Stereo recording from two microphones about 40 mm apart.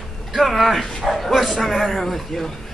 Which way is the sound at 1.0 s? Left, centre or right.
Centre.